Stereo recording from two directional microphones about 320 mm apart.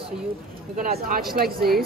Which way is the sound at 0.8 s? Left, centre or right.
Right.